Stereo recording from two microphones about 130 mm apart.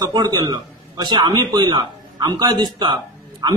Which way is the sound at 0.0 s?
30° right (ahead or behind).